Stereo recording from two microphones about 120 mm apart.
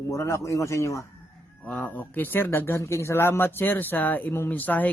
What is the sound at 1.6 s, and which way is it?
Speech, 10° left (ahead or behind).